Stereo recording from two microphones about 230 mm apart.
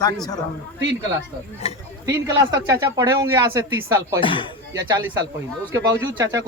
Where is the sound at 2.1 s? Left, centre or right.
Centre.